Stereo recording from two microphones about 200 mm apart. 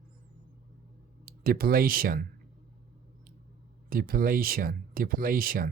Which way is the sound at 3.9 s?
45° right (ahead or behind).